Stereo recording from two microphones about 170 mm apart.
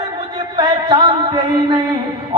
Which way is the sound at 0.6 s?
25° right (ahead or behind).